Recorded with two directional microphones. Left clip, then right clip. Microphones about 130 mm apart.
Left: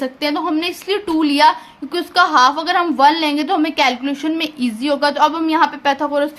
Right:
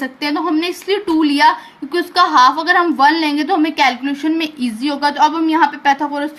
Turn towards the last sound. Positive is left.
turn(degrees=30)  # may be behind; listen again after turning